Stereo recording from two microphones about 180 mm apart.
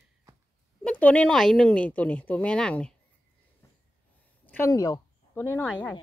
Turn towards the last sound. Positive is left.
turn(degrees=15)  # may be behind; listen again after turning